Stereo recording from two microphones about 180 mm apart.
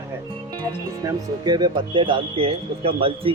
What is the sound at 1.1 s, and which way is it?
Speech, 25° right (ahead or behind).